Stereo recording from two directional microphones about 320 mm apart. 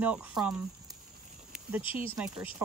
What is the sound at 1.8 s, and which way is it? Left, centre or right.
Speech, centre.